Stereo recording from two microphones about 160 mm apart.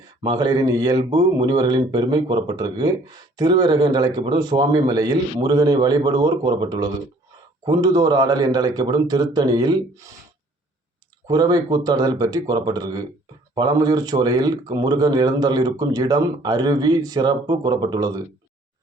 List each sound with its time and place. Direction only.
0.2 s speech: 25° right (ahead or behind)
11.3 s speech: 25° right (ahead or behind)